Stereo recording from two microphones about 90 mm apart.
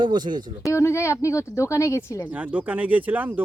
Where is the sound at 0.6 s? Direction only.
30° left (ahead or behind).